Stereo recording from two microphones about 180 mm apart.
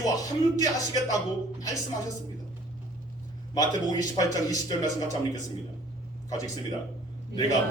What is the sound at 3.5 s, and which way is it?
A man's voice, 20° left (ahead or behind).